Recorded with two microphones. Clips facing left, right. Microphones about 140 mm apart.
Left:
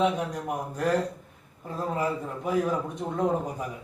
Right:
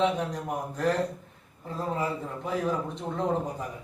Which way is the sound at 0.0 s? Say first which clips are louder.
Left 1 dB; 10° left (ahead or behind).